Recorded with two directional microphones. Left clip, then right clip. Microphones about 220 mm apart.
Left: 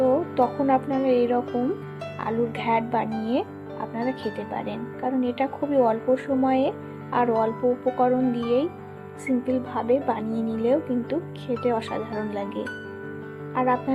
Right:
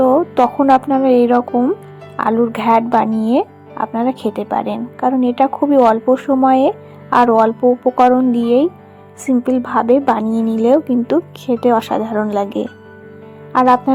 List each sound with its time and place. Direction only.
0.0 s speech: 30° right (ahead or behind)